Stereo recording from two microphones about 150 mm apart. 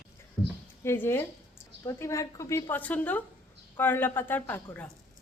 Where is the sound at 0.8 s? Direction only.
15° left (ahead or behind).